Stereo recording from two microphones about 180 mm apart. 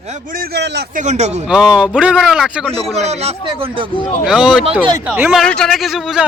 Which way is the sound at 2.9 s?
35° right (ahead or behind).